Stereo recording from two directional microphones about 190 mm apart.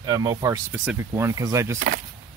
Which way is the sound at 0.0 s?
20° right (ahead or behind).